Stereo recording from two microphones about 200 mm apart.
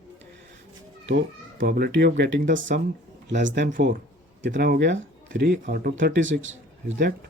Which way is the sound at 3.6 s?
45° right (ahead or behind).